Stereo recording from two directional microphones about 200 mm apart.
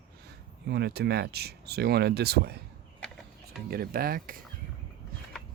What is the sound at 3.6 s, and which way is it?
Speech, 50° right (ahead or behind).